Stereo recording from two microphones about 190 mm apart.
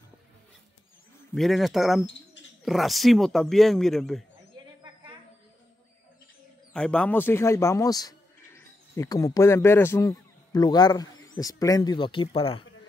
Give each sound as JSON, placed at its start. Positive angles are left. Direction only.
{"t": 1.3, "sound": "a man's voice", "side_deg": 0}
{"t": 6.7, "sound": "a man's voice", "side_deg": 5}